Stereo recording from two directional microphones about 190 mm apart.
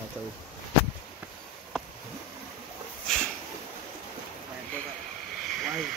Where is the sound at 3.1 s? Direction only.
Centre (ahead or behind).